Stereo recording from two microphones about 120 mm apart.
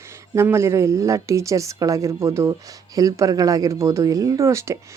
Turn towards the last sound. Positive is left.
turn(degrees=-25)  # may be behind; listen again after turning